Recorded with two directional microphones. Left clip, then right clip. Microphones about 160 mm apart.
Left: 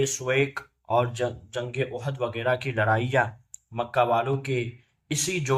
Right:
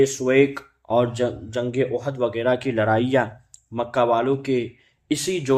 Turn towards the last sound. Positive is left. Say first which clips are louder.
# right 5 dB
turn(degrees=-30)  # may be behind; listen again after turning